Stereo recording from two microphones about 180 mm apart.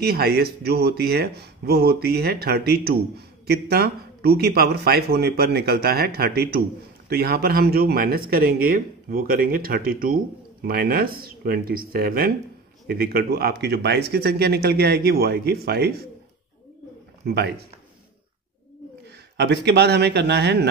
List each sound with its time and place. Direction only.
0.0 s speech: 60° right (ahead or behind)
19.3 s speech: 70° right (ahead or behind)